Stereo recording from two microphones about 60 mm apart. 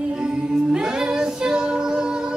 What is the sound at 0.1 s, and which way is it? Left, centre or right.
A capella, centre.